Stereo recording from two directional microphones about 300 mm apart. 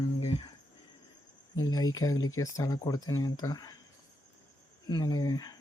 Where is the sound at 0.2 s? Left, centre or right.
Centre.